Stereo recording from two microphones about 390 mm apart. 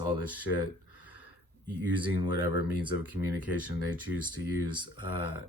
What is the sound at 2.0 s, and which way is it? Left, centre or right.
Speech, right.